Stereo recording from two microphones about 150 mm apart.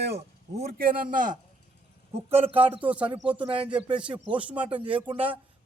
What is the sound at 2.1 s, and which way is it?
Speech, 40° right (ahead or behind).